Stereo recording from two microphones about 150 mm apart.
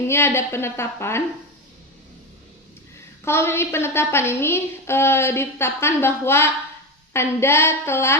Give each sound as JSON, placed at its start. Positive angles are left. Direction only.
{"t": 0.1, "sound": "a woman's voice", "side_deg": 15}
{"t": 3.2, "sound": "a woman's voice", "side_deg": 15}